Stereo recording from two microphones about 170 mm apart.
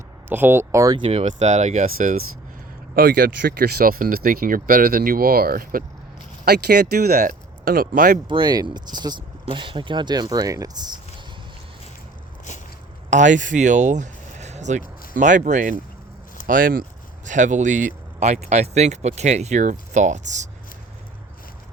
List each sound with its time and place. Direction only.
0.3 s speech: 10° right (ahead or behind)
1.0 s speech: 40° right (ahead or behind)
2.9 s speech: 60° right (ahead or behind)
6.4 s speech: 70° right (ahead or behind); by 8.2 s 55° right (ahead or behind)
8.3 s speech: 25° right (ahead or behind)
12.5 s a sound: 45° left (ahead or behind)
13.1 s speech: 45° right (ahead or behind)